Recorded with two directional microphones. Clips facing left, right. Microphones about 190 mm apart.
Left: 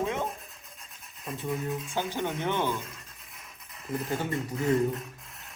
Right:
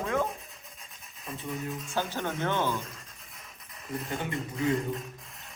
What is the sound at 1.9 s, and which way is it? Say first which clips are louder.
Speech: right 1 dB; 15° left (ahead or behind).